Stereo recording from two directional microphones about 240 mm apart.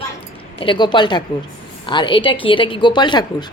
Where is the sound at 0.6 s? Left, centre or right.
Centre.